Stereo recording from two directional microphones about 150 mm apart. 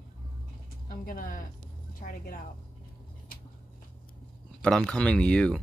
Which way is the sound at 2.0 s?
70° left (ahead or behind).